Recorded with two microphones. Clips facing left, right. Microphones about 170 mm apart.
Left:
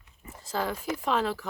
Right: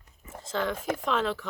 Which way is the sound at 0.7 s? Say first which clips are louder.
Right 2 dB; 50° right (ahead or behind).